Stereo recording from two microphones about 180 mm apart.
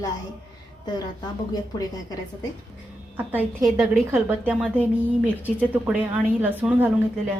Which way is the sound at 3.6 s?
15° right (ahead or behind).